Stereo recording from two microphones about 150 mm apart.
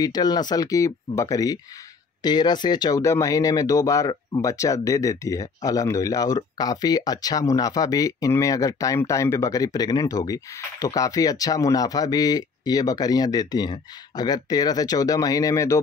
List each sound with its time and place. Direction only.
0.0 s speech: 25° left (ahead or behind)